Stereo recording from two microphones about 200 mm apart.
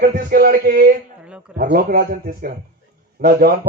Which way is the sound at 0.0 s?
50° right (ahead or behind).